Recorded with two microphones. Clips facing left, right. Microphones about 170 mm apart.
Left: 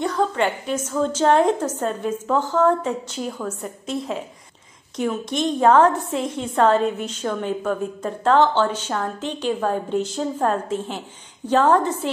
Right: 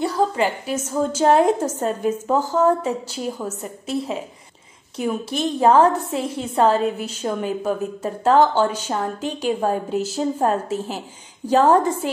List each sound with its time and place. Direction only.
0.0 s a woman's voice: 10° right (ahead or behind)
5.0 s a woman's voice: 30° right (ahead or behind)
5.8 s a woman's voice: 10° right (ahead or behind)
6.1 s a woman's voice: 30° right (ahead or behind)
6.7 s a woman's voice: 10° right (ahead or behind)